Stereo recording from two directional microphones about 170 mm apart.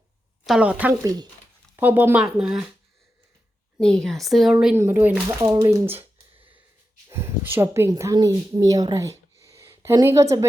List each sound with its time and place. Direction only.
0.4 s speech: 5° right (ahead or behind)
3.8 s speech: 5° left (ahead or behind)
4.6 s speech: 15° right (ahead or behind)
7.1 s speech: 15° right (ahead or behind)